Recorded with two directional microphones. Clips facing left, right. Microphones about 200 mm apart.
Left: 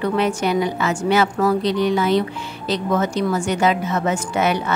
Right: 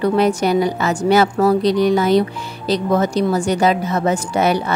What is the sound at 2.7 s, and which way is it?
Speech, 35° right (ahead or behind).